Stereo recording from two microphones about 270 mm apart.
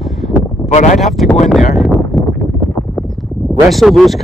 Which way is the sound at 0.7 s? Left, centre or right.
Left.